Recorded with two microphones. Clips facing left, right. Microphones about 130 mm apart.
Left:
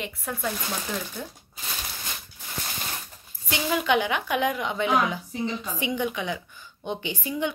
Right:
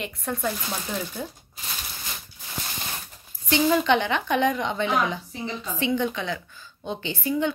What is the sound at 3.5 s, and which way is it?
A woman's voice, 5° left (ahead or behind).